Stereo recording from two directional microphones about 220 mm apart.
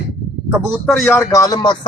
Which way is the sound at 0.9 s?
Centre (ahead or behind).